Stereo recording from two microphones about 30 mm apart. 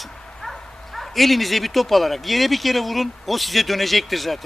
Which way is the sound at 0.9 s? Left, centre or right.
Centre.